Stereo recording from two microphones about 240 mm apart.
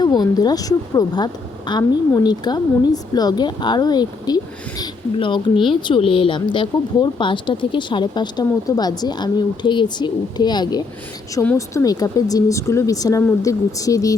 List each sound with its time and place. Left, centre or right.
0.0 s a woman's voice: centre